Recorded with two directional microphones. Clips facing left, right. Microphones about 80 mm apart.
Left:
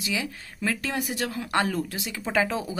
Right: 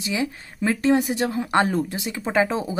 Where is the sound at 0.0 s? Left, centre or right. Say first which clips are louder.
Right 5 dB; right.